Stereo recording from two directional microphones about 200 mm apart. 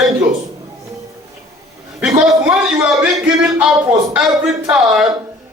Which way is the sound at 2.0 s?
5° right (ahead or behind).